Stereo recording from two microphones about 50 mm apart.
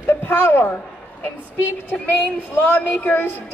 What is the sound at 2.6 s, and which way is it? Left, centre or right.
Speech, left.